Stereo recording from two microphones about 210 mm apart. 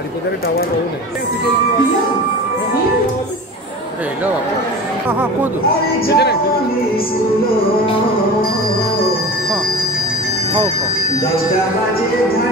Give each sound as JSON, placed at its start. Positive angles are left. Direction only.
{"t": 5.0, "sound": "speech", "side_deg": -10}
{"t": 6.0, "sound": "speech", "side_deg": 50}